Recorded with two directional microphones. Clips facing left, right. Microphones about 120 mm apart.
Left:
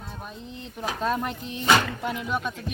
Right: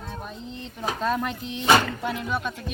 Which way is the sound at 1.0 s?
5° left (ahead or behind).